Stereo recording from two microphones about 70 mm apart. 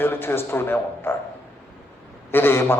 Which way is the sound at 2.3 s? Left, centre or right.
Left.